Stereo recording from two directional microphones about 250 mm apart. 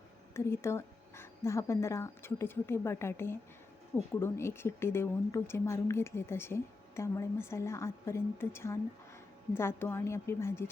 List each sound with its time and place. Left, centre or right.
0.3 s speech: centre